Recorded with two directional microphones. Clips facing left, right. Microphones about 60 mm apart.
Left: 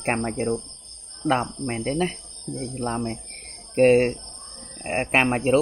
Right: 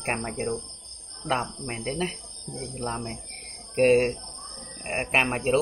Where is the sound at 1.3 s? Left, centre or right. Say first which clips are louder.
Left 5 dB; left.